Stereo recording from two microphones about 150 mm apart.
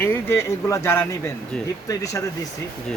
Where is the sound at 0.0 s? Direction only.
15° left (ahead or behind).